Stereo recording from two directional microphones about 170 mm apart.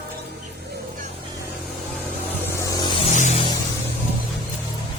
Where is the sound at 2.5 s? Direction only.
20° left (ahead or behind).